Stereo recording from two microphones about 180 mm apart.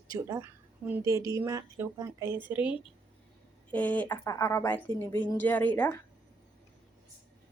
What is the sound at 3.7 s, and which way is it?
A woman's voice, 10° left (ahead or behind).